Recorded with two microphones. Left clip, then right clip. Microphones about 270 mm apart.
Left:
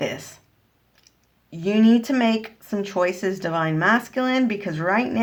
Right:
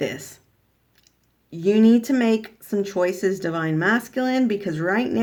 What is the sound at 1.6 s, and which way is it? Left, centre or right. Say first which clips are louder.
Speech: right 2 dB; centre.